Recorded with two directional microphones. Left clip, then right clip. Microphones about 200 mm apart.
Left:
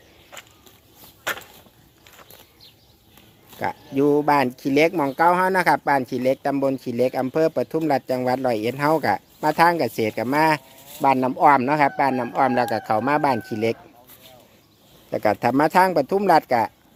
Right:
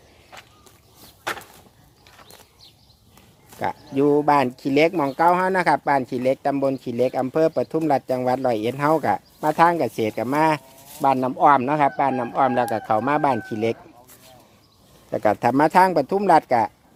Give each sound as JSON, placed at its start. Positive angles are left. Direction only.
{"t": 0.3, "sound": "a sound", "side_deg": 45}
{"t": 3.5, "sound": "speech", "side_deg": 5}
{"t": 15.1, "sound": "speech", "side_deg": 10}